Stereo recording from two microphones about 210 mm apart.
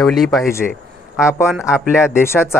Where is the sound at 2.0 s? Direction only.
10° left (ahead or behind).